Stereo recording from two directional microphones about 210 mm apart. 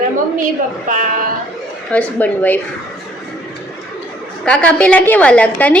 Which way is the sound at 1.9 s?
5° left (ahead or behind).